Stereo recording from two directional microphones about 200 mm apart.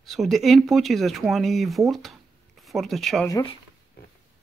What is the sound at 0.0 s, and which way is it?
Speech, centre (ahead or behind).